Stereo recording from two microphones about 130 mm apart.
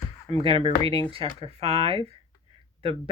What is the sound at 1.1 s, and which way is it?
Speech, 50° right (ahead or behind).